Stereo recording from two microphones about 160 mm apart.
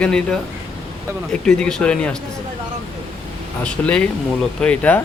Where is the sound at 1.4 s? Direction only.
5° left (ahead or behind).